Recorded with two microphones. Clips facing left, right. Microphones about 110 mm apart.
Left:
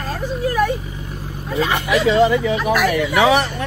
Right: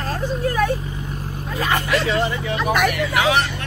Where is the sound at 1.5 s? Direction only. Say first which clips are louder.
Left 3 dB; 20° left (ahead or behind).